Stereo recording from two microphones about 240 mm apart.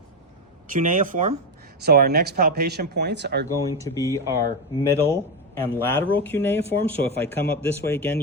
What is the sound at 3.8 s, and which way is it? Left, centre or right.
Speech, centre.